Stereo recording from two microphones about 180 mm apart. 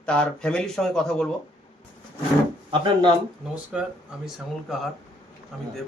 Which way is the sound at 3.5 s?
5° right (ahead or behind).